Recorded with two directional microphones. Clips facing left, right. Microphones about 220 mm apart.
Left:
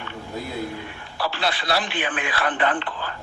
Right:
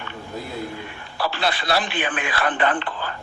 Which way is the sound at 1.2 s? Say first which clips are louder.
Right 2 dB; 50° right (ahead or behind).